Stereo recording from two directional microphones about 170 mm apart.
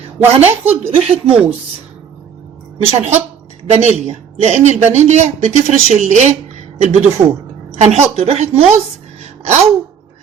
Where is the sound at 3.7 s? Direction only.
40° right (ahead or behind).